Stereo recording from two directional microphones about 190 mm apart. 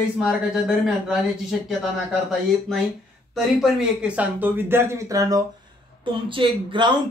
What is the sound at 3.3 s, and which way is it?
Speech, centre (ahead or behind).